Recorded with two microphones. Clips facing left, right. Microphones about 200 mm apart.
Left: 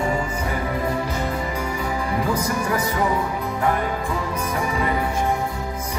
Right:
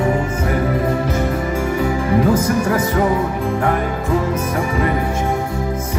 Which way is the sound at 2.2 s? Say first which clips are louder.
Right 8 dB; 50° right (ahead or behind).